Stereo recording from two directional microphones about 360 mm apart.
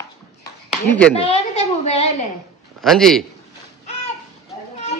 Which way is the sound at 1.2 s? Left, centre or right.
Centre.